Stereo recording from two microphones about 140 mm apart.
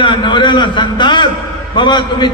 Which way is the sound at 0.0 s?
35° left (ahead or behind).